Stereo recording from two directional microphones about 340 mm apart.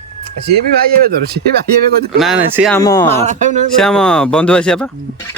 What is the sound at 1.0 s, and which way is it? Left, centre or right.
Speech, right.